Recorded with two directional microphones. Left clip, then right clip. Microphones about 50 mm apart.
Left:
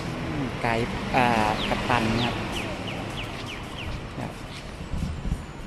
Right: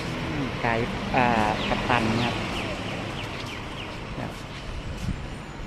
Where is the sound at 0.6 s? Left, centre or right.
Left.